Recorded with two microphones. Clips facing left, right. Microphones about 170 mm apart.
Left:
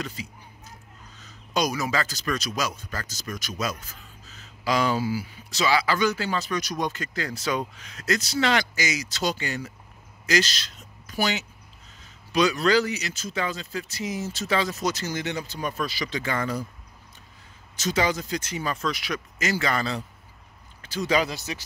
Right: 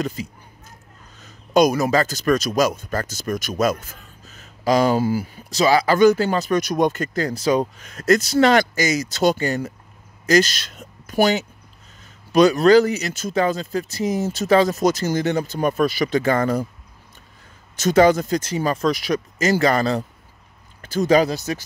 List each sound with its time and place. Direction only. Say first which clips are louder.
0.0 s speech: right 8 dB; 45° right (ahead or behind)
17.7 s speech: right 10 dB; 50° right (ahead or behind)